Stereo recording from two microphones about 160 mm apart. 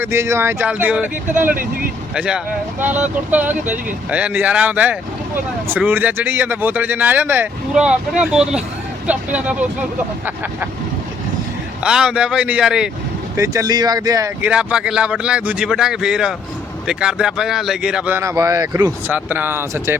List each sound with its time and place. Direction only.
0.0 s speech: 15° right (ahead or behind)
2.1 s speech: 5° right (ahead or behind)
11.8 s speech: 5° right (ahead or behind)
13.3 s speech: 20° right (ahead or behind)
14.4 s speech: 5° right (ahead or behind)